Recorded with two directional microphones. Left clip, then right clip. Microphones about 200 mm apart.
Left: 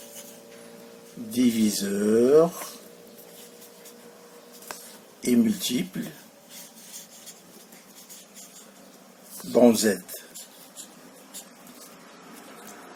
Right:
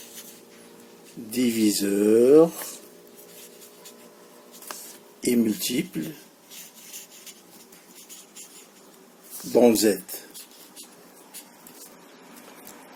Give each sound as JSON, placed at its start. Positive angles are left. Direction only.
{"t": 1.5, "sound": "mantra", "side_deg": -30}
{"t": 5.2, "sound": "mantra", "side_deg": -30}
{"t": 9.6, "sound": "speech", "side_deg": -30}